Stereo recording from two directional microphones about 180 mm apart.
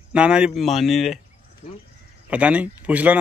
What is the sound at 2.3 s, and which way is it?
Speech, 5° right (ahead or behind).